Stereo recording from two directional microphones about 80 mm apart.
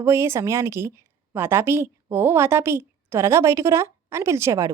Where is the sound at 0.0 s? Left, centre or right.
Right.